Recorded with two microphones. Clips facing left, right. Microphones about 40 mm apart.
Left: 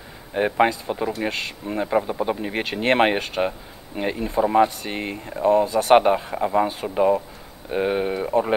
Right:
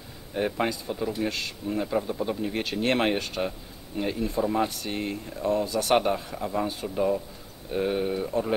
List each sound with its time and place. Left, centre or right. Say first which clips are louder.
0.3 s speech: left 7 dB; left